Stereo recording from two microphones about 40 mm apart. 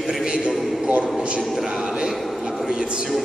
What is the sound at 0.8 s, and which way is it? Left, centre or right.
Speech, right.